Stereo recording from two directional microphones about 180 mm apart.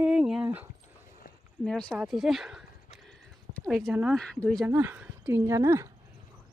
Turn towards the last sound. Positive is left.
turn(degrees=-15)  # may be behind; listen again after turning